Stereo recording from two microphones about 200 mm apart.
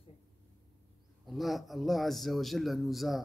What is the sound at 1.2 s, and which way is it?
A man's voice, centre (ahead or behind).